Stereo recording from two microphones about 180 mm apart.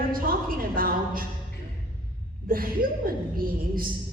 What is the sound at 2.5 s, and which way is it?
A woman's voice, 55° right (ahead or behind).